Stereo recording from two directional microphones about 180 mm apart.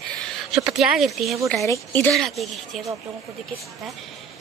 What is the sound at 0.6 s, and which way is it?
Speech, 5° right (ahead or behind).